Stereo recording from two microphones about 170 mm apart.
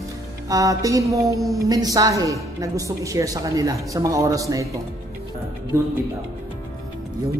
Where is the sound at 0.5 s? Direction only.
20° right (ahead or behind).